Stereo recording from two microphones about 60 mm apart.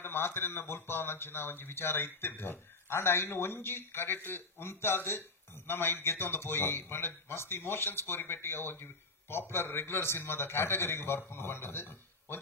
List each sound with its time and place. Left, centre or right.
0.0 s speech: left